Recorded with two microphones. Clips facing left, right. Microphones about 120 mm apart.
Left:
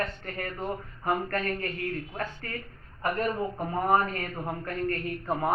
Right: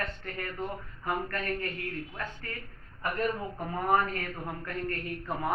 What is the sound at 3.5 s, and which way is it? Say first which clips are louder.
Speech: left 3 dB; 30° left (ahead or behind).